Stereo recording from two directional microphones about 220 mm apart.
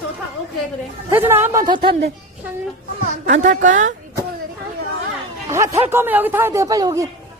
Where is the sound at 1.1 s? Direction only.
10° right (ahead or behind).